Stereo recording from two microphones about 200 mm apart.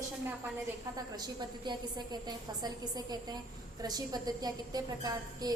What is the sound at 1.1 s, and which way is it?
A woman's voice, 20° right (ahead or behind).